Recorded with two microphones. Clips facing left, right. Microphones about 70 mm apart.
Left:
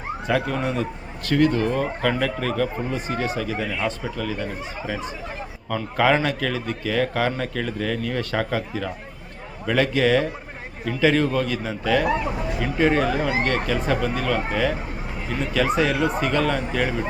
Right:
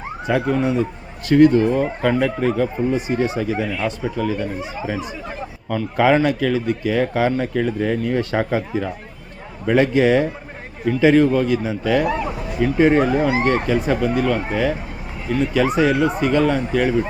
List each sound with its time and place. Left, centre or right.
0.3 s speech: centre
3.7 s speech: centre
5.6 s speech: centre